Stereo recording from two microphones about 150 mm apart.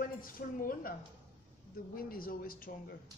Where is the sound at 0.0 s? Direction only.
70° left (ahead or behind).